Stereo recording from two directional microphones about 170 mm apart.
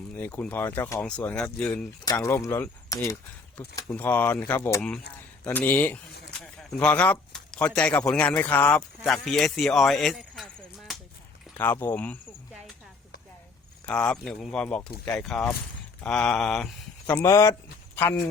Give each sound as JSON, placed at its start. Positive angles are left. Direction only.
{"t": 0.1, "sound": "speech", "side_deg": 10}
{"t": 2.0, "sound": "speech", "side_deg": 15}
{"t": 11.5, "sound": "speech", "side_deg": 10}
{"t": 13.8, "sound": "speech", "side_deg": 5}
{"t": 17.2, "sound": "speech", "side_deg": 15}